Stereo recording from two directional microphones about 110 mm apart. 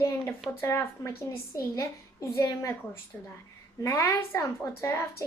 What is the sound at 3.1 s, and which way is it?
Speech, 15° left (ahead or behind).